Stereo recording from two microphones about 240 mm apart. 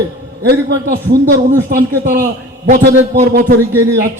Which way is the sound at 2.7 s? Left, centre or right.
Right.